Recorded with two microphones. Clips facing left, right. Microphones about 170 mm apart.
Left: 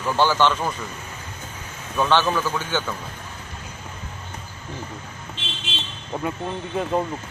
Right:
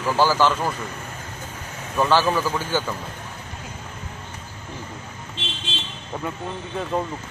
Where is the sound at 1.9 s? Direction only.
5° right (ahead or behind).